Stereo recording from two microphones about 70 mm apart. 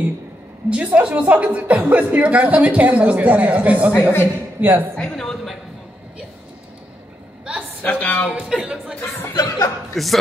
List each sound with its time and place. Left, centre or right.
0.7 s a woman's voice: centre
4.9 s a woman's voice: centre
7.8 s speech: left
8.3 s a woman's voice: centre
9.3 s speech: left
9.9 s a woman's voice: centre